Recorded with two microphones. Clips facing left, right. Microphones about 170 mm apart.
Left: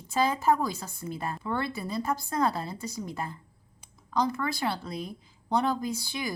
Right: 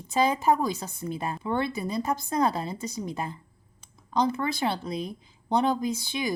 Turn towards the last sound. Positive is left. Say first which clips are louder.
# right 4 dB
turn(degrees=-20)  # may be behind; listen again after turning